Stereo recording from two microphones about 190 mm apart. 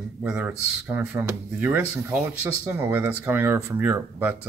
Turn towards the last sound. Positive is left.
turn(degrees=-10)  # may be behind; listen again after turning